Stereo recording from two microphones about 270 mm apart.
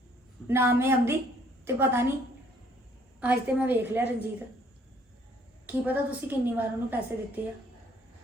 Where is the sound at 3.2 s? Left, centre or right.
Centre.